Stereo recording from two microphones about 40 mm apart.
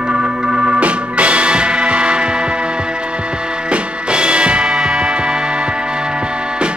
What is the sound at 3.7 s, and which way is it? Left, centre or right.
Music, right.